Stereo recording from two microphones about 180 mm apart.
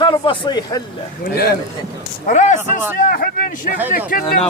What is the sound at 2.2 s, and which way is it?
Speech, 40° left (ahead or behind).